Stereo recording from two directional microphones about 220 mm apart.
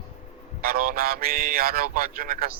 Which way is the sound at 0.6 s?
40° right (ahead or behind).